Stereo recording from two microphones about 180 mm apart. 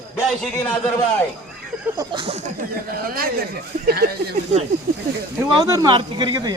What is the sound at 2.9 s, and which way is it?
Speech, 55° right (ahead or behind).